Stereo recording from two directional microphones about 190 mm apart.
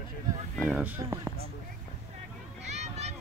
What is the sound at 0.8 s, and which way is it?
Speech, 10° right (ahead or behind).